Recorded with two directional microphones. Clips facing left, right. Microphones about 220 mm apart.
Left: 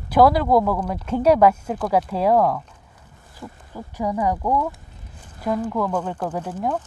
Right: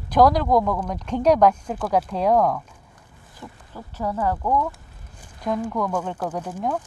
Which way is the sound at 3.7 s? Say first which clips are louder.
Left 3 dB; 15° left (ahead or behind).